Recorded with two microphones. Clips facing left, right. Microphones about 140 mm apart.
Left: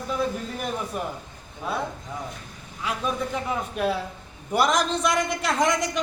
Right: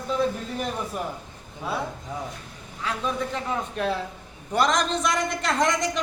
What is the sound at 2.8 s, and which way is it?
A man's voice, 10° left (ahead or behind).